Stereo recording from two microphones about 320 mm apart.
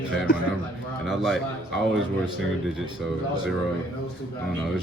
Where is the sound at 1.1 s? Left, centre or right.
Centre.